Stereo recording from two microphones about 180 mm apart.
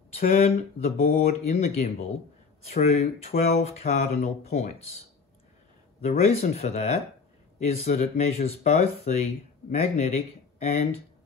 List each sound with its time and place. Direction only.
0.2 s speech: 50° left (ahead or behind)
1.1 s speech: 40° left (ahead or behind)
6.0 s speech: 35° left (ahead or behind)